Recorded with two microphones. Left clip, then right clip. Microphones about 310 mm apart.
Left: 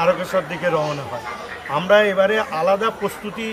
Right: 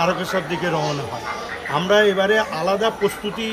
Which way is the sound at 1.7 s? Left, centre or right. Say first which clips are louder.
Left 1 dB; centre.